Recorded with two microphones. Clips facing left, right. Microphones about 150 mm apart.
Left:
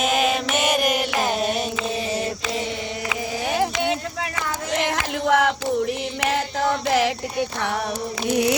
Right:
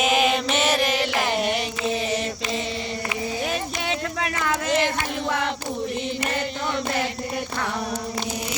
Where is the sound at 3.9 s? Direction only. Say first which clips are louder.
Left 1 dB; 80° right.